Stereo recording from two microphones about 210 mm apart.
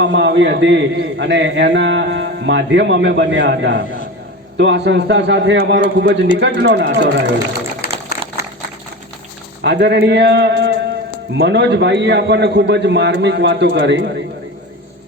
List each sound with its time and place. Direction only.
0.0 s a man's voice: 60° right (ahead or behind)
7.8 s a sound: 45° left (ahead or behind)
9.6 s a man's voice: 55° right (ahead or behind)